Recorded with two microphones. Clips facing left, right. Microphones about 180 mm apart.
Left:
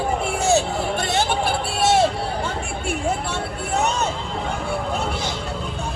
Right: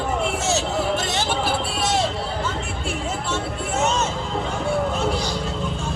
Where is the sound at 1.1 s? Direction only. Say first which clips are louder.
Left 2 dB; 55° left (ahead or behind).